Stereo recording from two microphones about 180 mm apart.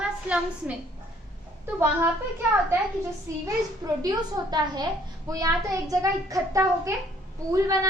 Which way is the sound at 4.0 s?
20° right (ahead or behind).